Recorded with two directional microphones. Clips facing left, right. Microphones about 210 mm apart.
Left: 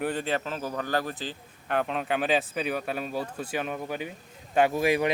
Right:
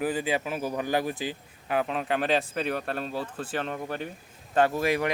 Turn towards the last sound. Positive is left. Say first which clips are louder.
# left 2 dB
turn(degrees=20)  # may be behind; listen again after turning